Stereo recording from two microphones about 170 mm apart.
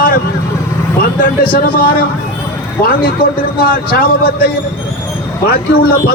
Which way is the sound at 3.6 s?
60° left (ahead or behind).